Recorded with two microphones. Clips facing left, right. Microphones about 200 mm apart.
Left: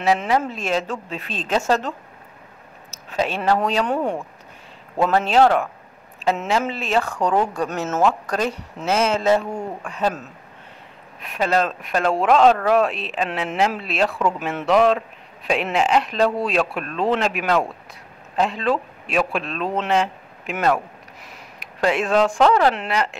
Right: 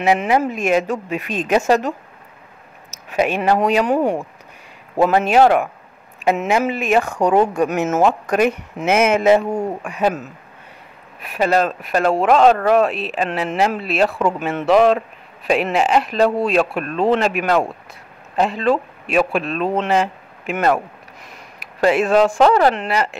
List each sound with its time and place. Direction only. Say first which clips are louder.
0.0 s speech: right 3 dB; 15° right (ahead or behind)